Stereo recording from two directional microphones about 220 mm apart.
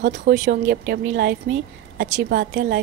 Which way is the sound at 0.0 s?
35° right (ahead or behind).